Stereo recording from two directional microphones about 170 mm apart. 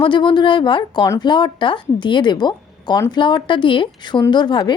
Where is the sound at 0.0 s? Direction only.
30° left (ahead or behind).